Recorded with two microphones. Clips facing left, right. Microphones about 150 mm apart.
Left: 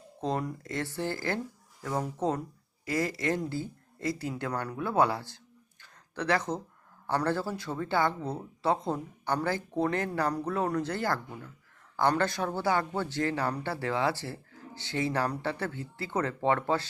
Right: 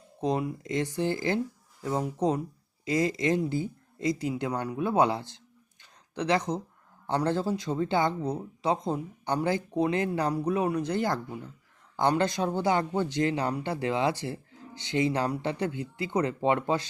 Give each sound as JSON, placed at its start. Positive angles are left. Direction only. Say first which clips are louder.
{"t": 0.2, "sound": "speech", "louder": "right 3 dB", "side_deg": -15}
{"t": 5.8, "sound": "a sound", "louder": "right 2 dB", "side_deg": -20}
{"t": 7.1, "sound": "speech", "louder": "right 2 dB", "side_deg": -20}